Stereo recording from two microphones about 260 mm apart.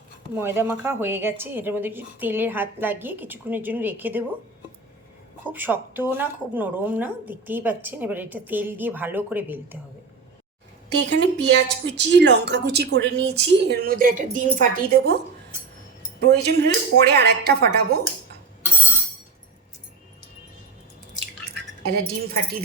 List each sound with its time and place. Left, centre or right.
0.3 s a woman's voice: centre
5.5 s a woman's voice: centre
10.8 s speech: right
16.2 s speech: right
21.9 s speech: right